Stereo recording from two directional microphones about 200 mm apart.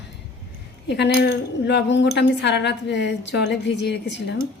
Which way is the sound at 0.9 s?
55° left (ahead or behind).